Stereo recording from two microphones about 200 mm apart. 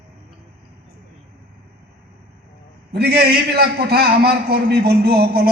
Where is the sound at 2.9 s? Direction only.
55° right (ahead or behind).